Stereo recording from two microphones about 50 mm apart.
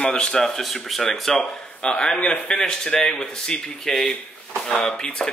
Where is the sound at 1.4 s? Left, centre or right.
Centre.